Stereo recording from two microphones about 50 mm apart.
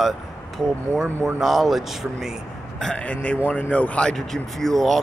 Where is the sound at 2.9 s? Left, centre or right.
Left.